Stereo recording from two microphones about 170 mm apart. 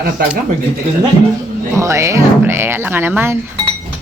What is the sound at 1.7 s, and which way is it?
Speech, 15° right (ahead or behind).